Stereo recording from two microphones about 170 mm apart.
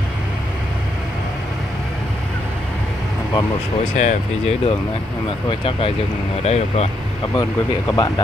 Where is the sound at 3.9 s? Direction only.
45° left (ahead or behind).